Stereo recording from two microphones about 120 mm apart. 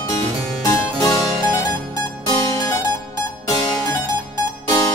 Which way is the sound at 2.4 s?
30° left (ahead or behind).